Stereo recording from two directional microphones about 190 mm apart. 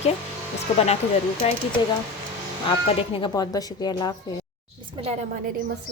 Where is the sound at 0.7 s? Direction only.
35° left (ahead or behind).